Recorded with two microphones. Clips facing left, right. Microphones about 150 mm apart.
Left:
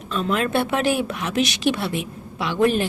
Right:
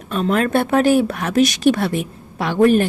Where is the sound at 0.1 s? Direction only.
45° right (ahead or behind).